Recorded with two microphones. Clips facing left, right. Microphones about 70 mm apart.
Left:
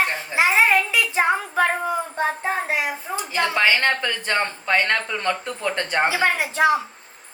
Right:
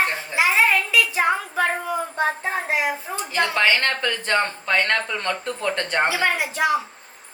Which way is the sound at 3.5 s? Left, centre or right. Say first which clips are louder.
Left 2 dB; centre.